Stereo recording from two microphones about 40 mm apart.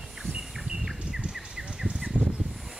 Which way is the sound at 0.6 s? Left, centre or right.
Centre.